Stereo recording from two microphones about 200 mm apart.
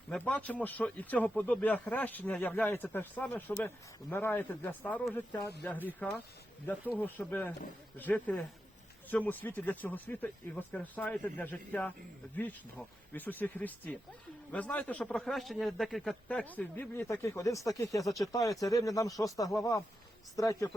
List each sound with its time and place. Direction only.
0.1 s speech: 5° left (ahead or behind)
13.1 s speech: 10° left (ahead or behind)